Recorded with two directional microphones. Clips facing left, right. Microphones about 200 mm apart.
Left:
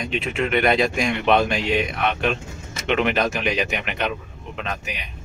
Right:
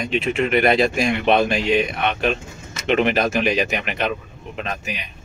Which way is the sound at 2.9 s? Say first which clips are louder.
Right 3 dB; 35° right (ahead or behind).